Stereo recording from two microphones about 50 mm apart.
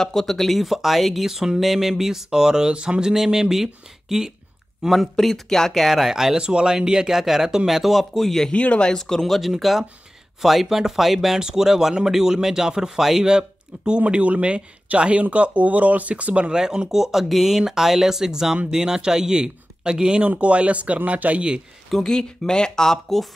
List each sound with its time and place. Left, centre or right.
0.0 s speech: centre
3.1 s speech: centre
5.1 s speech: centre
6.3 s speech: centre
8.5 s speech: left
8.9 s speech: centre; by 16.5 s right
16.5 s speech: centre
21.9 s speech: centre